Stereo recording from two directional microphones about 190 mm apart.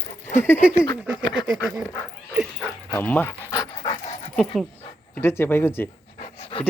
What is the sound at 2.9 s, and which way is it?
Dog, 10° left (ahead or behind).